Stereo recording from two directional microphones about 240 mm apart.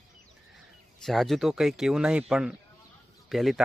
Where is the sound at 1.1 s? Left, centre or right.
Centre.